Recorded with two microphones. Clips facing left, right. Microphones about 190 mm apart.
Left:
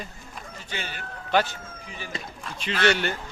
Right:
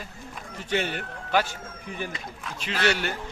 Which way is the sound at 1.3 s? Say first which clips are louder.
Left 2 dB; 10° right (ahead or behind).